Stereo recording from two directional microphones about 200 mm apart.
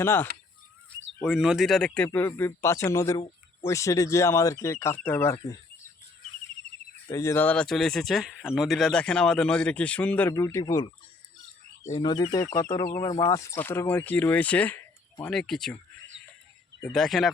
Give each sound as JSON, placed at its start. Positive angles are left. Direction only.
{"t": 0.0, "sound": "speech", "side_deg": 10}
{"t": 1.2, "sound": "speech", "side_deg": 0}
{"t": 7.1, "sound": "speech", "side_deg": 15}
{"t": 16.9, "sound": "speech", "side_deg": 0}